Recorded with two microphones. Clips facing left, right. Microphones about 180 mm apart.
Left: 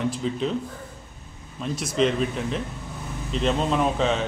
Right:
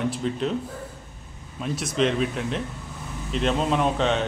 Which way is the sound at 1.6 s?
Centre (ahead or behind).